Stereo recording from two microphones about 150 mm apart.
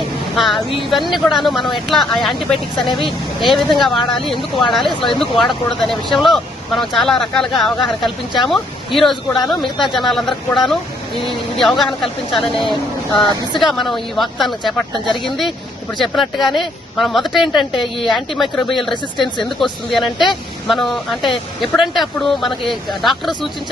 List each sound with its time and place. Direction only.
0.3 s speech: centre (ahead or behind)
2.7 s speech: 30° left (ahead or behind)
3.0 s speech: centre (ahead or behind)
4.9 s speech: 35° left (ahead or behind)
5.4 s speech: centre (ahead or behind)